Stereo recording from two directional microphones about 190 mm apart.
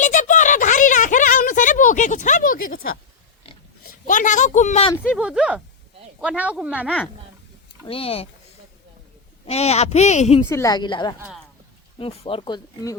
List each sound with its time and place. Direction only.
0.0 s a sound: 40° left (ahead or behind)
3.8 s speech: 45° left (ahead or behind)
5.1 s speech: 5° right (ahead or behind)
7.9 s speech: 30° left (ahead or behind)
9.5 s speech: 35° left (ahead or behind)
10.5 s speech: 15° left (ahead or behind)